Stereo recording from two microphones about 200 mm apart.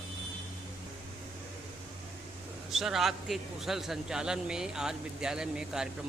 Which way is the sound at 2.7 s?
Centre (ahead or behind).